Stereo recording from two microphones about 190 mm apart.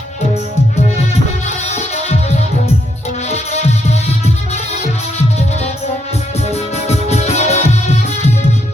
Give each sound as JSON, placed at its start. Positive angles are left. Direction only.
{"t": 1.5, "sound": "music", "side_deg": 35}
{"t": 6.5, "sound": "music", "side_deg": 35}